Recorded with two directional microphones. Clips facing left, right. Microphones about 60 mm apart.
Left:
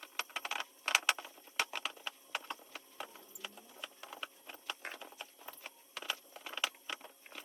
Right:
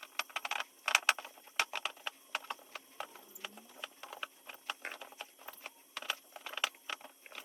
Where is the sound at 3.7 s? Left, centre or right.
Centre.